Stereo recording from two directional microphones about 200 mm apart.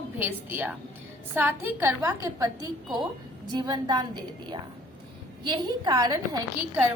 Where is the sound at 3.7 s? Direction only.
20° right (ahead or behind).